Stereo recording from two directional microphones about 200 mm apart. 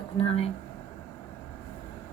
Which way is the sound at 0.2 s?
30° left (ahead or behind).